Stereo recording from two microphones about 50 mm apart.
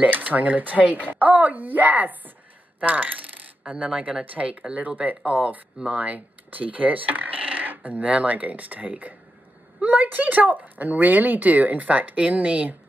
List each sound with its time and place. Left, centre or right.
0.0 s speech: right
2.8 s coin: right
3.7 s speech: right